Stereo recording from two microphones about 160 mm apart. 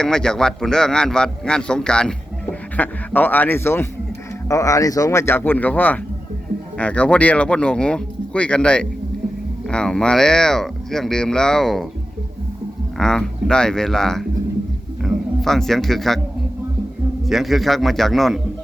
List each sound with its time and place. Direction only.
0.0 s a man's voice: 5° left (ahead or behind)
13.0 s a man's voice: 5° left (ahead or behind)
17.2 s a man's voice: centre (ahead or behind)